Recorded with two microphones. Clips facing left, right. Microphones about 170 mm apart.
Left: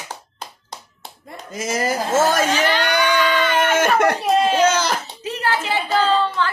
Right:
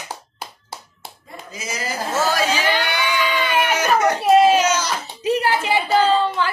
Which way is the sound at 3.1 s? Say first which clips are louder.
Left 3 dB; 10° right (ahead or behind).